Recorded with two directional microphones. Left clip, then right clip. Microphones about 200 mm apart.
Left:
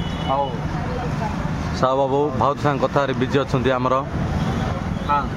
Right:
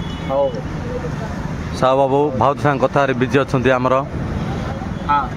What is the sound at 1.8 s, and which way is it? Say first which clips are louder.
Speech: right 4 dB; 15° right (ahead or behind).